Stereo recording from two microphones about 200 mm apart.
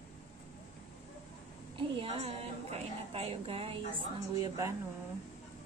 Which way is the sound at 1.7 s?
25° right (ahead or behind).